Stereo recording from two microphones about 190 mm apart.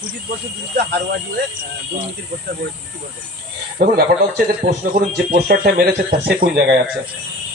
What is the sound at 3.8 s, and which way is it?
A man's voice, 50° right (ahead or behind).